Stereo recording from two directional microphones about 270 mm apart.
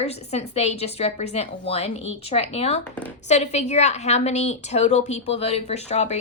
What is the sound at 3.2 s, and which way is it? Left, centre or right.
A woman's voice, left.